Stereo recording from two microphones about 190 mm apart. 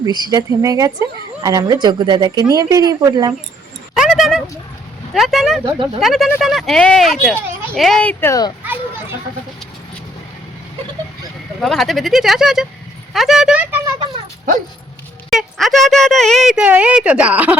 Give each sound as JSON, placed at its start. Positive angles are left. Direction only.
{"t": 0.0, "sound": "a woman's voice", "side_deg": -20}
{"t": 3.9, "sound": "a sound", "side_deg": -5}
{"t": 5.1, "sound": "speech", "side_deg": 0}
{"t": 5.6, "sound": "a woman's voice", "side_deg": -25}
{"t": 6.0, "sound": "speech", "side_deg": 0}
{"t": 8.6, "sound": "children playing", "side_deg": -10}
{"t": 11.6, "sound": "speech", "side_deg": 0}
{"t": 15.3, "sound": "speech", "side_deg": 0}